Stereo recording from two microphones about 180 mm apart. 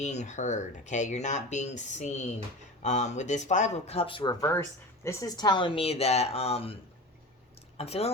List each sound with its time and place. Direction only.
0.0 s speech: 40° left (ahead or behind)
7.8 s speech: 35° left (ahead or behind)